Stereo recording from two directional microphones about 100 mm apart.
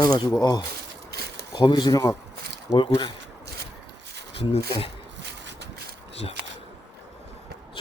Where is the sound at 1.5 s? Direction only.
50° left (ahead or behind).